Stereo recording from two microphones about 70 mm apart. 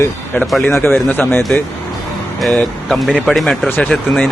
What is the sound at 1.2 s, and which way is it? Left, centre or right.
Speech, left.